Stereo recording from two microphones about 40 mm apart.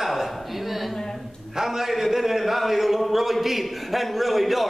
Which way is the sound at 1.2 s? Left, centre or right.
Centre.